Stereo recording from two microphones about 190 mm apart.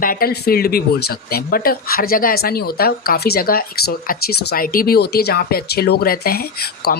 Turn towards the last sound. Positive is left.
turn(degrees=55)  # may be behind; listen again after turning